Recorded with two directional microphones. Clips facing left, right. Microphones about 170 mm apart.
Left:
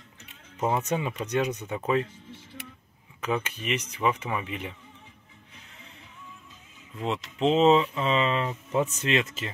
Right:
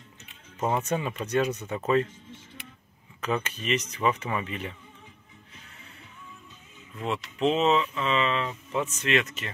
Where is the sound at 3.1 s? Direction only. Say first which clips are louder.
Even; 10° left (ahead or behind).